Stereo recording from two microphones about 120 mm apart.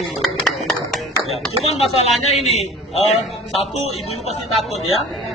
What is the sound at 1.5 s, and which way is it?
Speech, 55° left (ahead or behind).